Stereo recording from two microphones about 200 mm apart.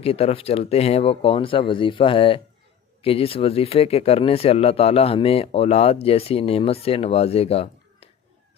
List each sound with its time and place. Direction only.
0.0 s speech: 30° left (ahead or behind)